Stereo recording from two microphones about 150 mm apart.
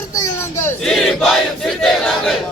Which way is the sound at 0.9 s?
Centre (ahead or behind).